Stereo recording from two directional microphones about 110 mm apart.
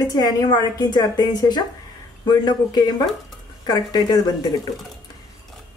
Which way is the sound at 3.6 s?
35° left (ahead or behind).